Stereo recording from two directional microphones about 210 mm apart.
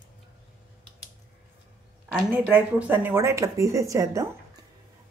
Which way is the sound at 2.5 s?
10° right (ahead or behind).